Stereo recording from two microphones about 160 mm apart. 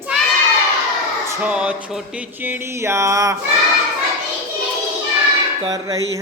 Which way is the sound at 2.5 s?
15° right (ahead or behind).